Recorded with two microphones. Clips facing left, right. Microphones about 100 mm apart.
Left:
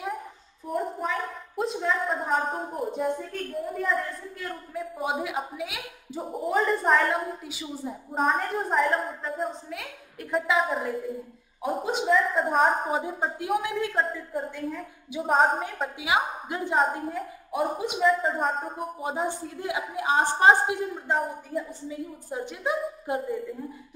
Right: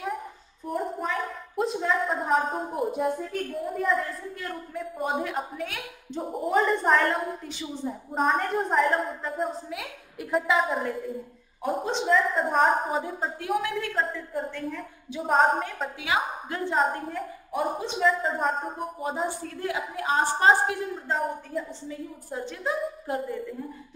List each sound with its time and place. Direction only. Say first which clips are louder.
0.7 s a woman's voice: even; centre (ahead or behind)
13.6 s a woman's voice: left 1 dB; 20° left (ahead or behind)
13.9 s a woman's voice: left 1 dB; 5° left (ahead or behind)
16.0 s a woman's voice: left 2 dB; 15° left (ahead or behind)
16.7 s a woman's voice: left 1 dB; centre (ahead or behind)
19.2 s a woman's voice: even; 15° left (ahead or behind)
21.1 s a woman's voice: left 1 dB; 5° left (ahead or behind)
22.3 s a woman's voice: left 1 dB; 15° left (ahead or behind)